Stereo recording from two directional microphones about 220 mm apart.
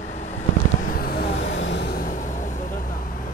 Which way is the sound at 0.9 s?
40° left (ahead or behind).